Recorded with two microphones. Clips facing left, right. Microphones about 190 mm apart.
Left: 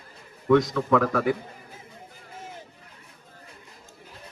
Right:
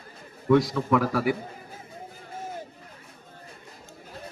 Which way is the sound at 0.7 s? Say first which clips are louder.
Left 1 dB; 5° right (ahead or behind).